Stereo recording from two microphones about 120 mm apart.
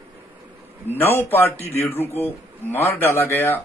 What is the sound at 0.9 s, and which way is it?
Speech, 20° left (ahead or behind).